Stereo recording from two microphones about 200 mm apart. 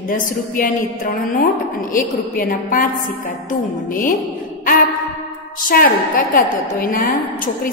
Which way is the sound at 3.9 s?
40° left (ahead or behind).